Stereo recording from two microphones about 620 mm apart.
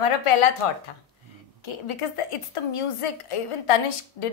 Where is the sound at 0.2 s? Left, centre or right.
Left.